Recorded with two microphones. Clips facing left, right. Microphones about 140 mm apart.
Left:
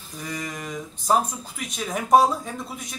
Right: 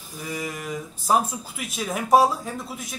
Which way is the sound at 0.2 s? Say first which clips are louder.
Right 1 dB; 5° right (ahead or behind).